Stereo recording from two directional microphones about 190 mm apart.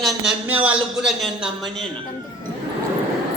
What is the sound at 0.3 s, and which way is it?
A man's voice, 10° right (ahead or behind).